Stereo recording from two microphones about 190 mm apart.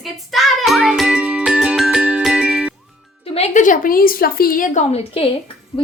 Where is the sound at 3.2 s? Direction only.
35° left (ahead or behind).